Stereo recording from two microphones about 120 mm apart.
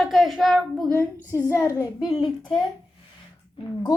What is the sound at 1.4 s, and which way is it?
Speech, 25° left (ahead or behind).